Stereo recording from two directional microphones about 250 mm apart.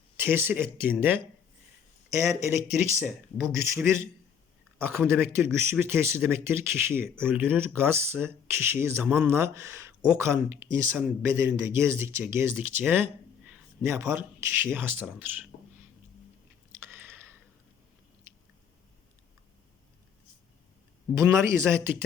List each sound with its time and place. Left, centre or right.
0.2 s a man's voice: centre
15.5 s a sound: left
21.2 s speech: centre